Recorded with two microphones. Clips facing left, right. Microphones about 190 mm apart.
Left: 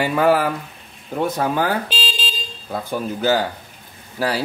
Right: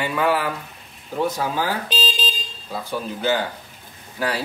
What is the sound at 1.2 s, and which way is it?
Speech, 55° left (ahead or behind).